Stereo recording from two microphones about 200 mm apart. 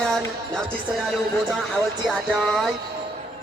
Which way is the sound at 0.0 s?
Centre (ahead or behind).